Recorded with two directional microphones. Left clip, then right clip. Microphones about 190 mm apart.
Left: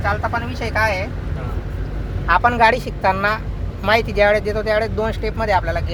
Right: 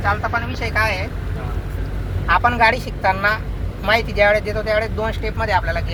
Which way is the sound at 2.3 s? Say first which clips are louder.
Left 1 dB; 55° left (ahead or behind).